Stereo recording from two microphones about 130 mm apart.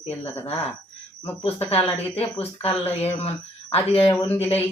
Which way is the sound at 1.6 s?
50° left (ahead or behind).